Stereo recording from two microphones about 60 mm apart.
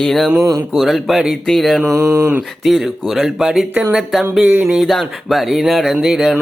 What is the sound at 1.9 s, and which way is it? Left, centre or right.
Music, right.